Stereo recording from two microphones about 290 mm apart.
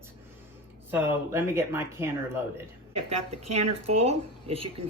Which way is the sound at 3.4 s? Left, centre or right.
Right.